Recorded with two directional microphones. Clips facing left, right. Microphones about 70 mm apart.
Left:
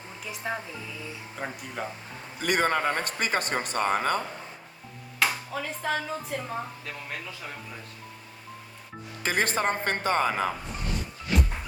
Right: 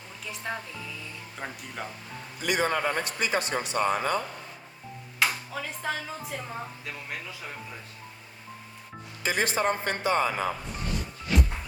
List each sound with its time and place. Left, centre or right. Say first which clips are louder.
0.3 s speech: left 2 dB; centre
2.4 s speech: left 2 dB; left
5.2 s speech: left 1 dB; centre
9.2 s speech: even; left